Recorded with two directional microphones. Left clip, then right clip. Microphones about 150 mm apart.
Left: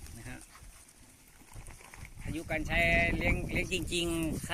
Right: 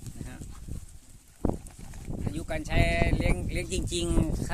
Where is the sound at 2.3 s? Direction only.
25° right (ahead or behind).